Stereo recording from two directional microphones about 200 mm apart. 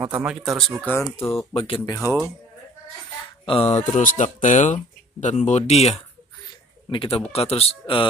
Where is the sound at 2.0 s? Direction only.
15° left (ahead or behind).